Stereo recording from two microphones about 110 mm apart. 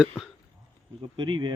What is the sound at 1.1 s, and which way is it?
Speech, 45° right (ahead or behind).